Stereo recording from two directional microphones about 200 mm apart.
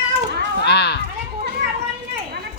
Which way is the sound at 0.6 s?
55° left (ahead or behind).